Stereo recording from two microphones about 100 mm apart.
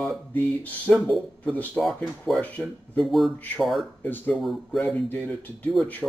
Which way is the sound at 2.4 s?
15° left (ahead or behind).